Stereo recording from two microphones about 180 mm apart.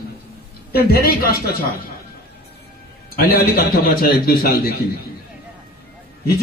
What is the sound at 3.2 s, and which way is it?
A man's voice, 55° left (ahead or behind).